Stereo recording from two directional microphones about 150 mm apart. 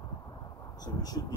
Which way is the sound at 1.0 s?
25° left (ahead or behind).